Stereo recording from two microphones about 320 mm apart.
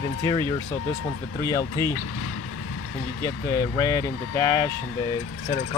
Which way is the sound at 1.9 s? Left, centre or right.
Left.